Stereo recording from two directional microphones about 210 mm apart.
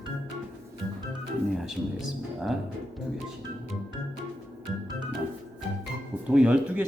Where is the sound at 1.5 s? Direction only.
Centre (ahead or behind).